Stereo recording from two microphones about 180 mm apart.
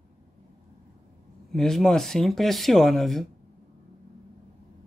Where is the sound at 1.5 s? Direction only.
Centre (ahead or behind).